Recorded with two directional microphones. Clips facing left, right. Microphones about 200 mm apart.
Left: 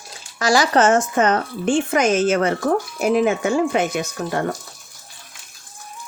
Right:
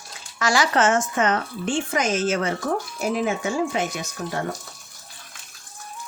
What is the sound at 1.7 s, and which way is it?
Speech, 60° left (ahead or behind).